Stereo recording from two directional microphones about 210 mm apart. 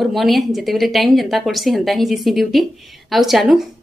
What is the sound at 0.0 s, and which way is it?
A woman's voice, centre (ahead or behind).